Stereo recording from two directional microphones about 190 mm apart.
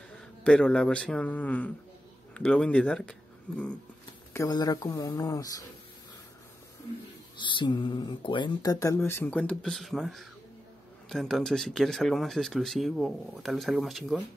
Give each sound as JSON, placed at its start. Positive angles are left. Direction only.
{"t": 0.4, "sound": "speech", "side_deg": 5}
{"t": 4.3, "sound": "speech", "side_deg": 15}
{"t": 7.3, "sound": "speech", "side_deg": 25}
{"t": 8.7, "sound": "speech", "side_deg": 15}